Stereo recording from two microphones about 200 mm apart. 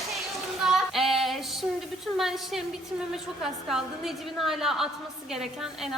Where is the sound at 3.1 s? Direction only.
Centre (ahead or behind).